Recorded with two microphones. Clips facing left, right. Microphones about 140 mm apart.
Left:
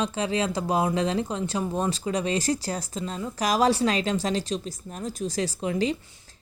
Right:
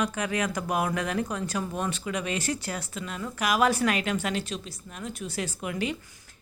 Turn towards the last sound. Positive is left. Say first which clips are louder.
# left 5 dB
turn(degrees=30)  # may be behind; listen again after turning